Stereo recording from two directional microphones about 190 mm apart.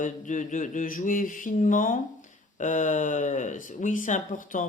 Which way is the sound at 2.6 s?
40° left (ahead or behind).